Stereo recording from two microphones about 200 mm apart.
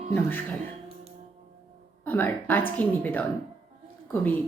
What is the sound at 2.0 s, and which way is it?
Speech, 10° left (ahead or behind).